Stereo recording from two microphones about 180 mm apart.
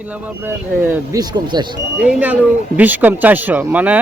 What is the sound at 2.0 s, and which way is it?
Speech, 5° right (ahead or behind).